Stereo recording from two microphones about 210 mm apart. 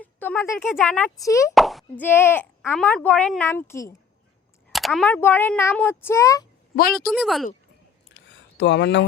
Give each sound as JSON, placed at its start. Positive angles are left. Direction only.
{"t": 0.0, "sound": "a sound", "side_deg": 10}
{"t": 0.8, "sound": "speech", "side_deg": 10}
{"t": 1.5, "sound": "plop", "side_deg": 0}
{"t": 2.0, "sound": "speech", "side_deg": 10}
{"t": 4.7, "sound": "speech", "side_deg": 0}
{"t": 6.9, "sound": "speech", "side_deg": 0}
{"t": 8.1, "sound": "a sound", "side_deg": 55}